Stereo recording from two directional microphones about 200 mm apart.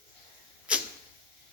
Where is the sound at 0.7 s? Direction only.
5° right (ahead or behind).